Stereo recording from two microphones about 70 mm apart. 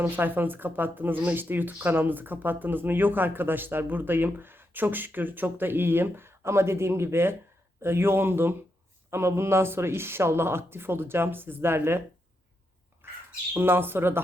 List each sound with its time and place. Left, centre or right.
0.0 s speech: right
13.0 s bird: right
13.5 s speech: right